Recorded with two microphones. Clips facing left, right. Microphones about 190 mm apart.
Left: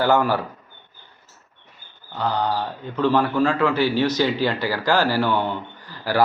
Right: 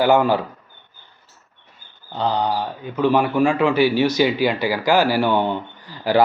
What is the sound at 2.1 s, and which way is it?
A man's voice, 20° right (ahead or behind).